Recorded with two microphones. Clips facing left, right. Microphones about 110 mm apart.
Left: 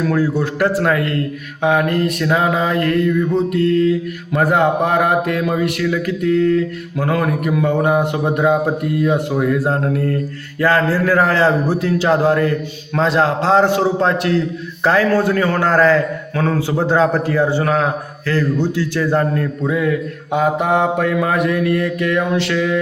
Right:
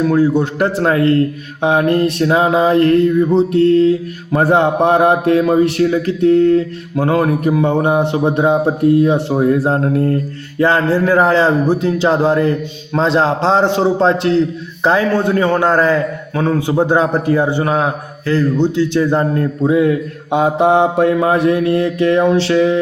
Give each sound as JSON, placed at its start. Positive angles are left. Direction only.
{"t": 0.6, "sound": "a man's voice", "side_deg": -25}
{"t": 4.3, "sound": "mantra", "side_deg": -30}
{"t": 8.6, "sound": "a man's voice", "side_deg": -30}
{"t": 19.4, "sound": "mantra", "side_deg": -30}